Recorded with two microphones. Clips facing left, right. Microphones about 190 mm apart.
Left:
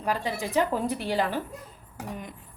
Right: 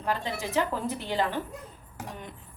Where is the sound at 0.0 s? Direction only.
15° left (ahead or behind).